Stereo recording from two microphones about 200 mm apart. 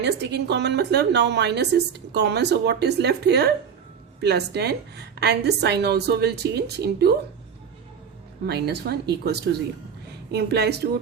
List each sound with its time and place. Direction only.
0.0 s a woman's voice: 55° right (ahead or behind)
8.4 s a woman's voice: 55° right (ahead or behind)